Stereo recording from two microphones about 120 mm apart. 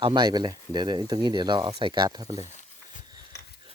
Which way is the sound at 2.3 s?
75° left (ahead or behind).